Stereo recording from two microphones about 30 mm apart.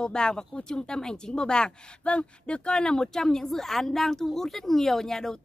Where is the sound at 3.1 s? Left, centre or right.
Centre.